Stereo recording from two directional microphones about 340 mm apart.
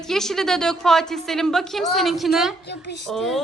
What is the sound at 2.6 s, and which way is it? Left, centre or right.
Speech, left.